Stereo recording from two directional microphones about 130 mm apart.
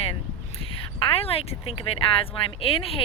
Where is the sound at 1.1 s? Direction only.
50° left (ahead or behind).